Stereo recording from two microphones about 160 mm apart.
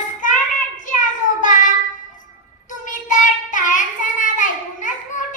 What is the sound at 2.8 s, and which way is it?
Child singing, 55° left (ahead or behind).